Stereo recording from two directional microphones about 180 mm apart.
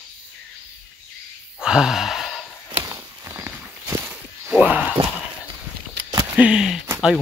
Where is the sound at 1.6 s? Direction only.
5° right (ahead or behind).